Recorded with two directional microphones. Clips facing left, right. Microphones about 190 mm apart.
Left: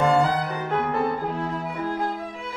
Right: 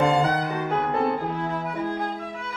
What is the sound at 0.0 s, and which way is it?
Music, 20° right (ahead or behind).